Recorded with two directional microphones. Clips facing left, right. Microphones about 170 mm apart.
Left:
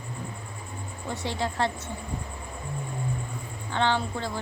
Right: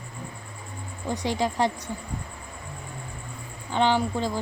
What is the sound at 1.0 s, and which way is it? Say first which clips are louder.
Speech: right 4 dB; 15° right (ahead or behind).